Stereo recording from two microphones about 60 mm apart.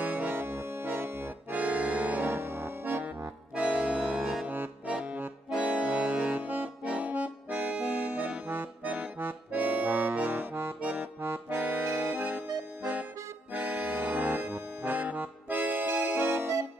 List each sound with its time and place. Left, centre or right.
0.0 s music: right
3.5 s accordion: centre
4.5 s music: right
4.9 s accordion: centre
6.0 s accordion: right
10.8 s accordion: right